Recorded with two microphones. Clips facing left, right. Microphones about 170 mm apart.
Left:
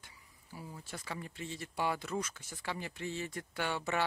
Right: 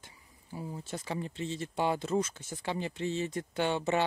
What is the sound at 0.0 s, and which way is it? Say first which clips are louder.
Speech: right 3 dB; 25° right (ahead or behind).